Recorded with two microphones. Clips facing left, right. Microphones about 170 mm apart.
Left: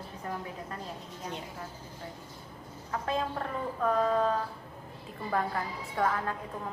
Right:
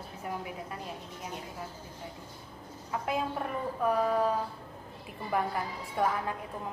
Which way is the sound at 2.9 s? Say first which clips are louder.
Even; 15° right (ahead or behind).